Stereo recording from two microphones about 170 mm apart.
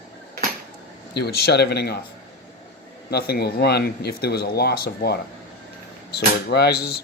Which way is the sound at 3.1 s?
65° left (ahead or behind).